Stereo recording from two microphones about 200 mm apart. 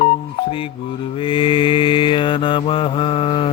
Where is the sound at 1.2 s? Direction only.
25° left (ahead or behind).